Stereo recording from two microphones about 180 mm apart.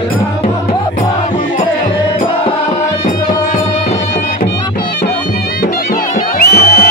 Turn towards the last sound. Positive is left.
turn(degrees=55)  # may be behind; listen again after turning